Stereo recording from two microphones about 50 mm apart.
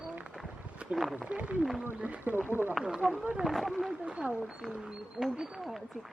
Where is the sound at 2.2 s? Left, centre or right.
Right.